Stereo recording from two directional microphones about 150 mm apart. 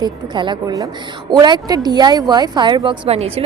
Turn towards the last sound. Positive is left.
turn(degrees=-40)  # may be behind; listen again after turning